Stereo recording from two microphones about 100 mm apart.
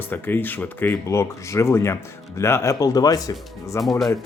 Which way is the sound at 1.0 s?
30° left (ahead or behind).